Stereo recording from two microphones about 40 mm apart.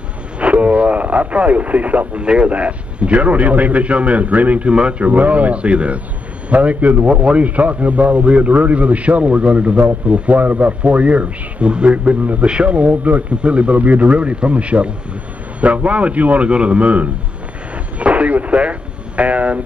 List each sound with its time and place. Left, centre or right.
0.4 s a man's voice: right
4.7 s speech: right
5.0 s a man's voice: right
13.4 s a man's voice: right